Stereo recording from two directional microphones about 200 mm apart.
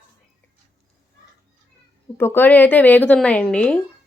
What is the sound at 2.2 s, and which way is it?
A woman's voice, 10° left (ahead or behind).